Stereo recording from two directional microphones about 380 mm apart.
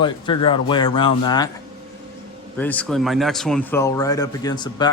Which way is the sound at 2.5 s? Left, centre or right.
Centre.